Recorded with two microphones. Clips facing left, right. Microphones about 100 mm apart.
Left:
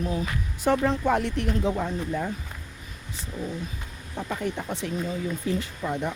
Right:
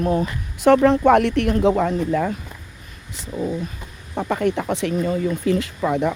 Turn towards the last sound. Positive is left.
turn(degrees=-90)